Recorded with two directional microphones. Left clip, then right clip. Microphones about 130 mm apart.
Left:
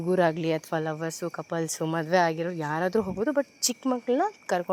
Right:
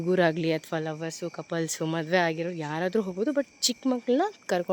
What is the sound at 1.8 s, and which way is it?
Speech, 25° right (ahead or behind).